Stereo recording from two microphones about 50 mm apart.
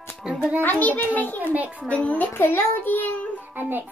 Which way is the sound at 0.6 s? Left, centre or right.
Left.